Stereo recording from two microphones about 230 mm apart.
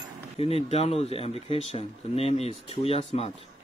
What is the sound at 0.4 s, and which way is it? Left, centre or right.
Speech, left.